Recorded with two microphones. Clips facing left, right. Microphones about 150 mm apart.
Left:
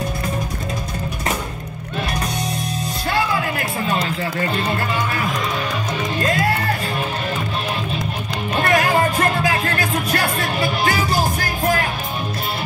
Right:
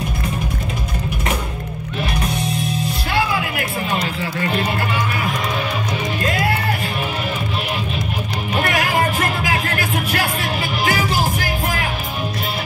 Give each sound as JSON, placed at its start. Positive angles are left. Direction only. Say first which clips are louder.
{"t": 8.6, "sound": "music", "louder": "left 4 dB", "side_deg": 35}